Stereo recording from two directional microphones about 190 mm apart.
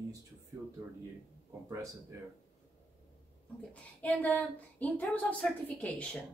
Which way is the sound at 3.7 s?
10° left (ahead or behind).